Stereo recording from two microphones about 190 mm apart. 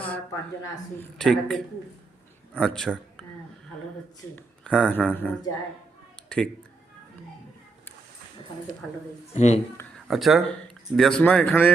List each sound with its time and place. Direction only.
0.0 s speech: 10° left (ahead or behind)
1.2 s a man's voice: 5° left (ahead or behind)
4.4 s speech: 5° left (ahead or behind)
6.1 s a sound: 5° left (ahead or behind)
9.3 s speech: 35° left (ahead or behind)
10.1 s speech: centre (ahead or behind)